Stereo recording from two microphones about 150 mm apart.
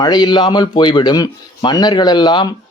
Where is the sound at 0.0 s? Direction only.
30° left (ahead or behind).